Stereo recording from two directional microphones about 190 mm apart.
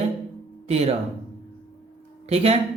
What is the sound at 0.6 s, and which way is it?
Speech, 35° right (ahead or behind).